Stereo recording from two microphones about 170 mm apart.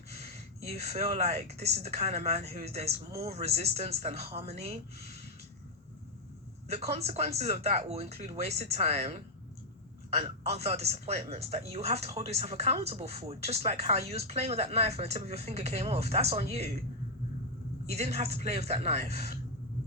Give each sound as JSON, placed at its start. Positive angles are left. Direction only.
{"t": 0.2, "sound": "speech", "side_deg": -40}
{"t": 6.7, "sound": "speech", "side_deg": -40}
{"t": 17.8, "sound": "speech", "side_deg": -40}